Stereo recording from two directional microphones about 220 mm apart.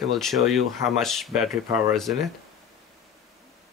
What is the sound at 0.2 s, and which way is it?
Speech, centre (ahead or behind).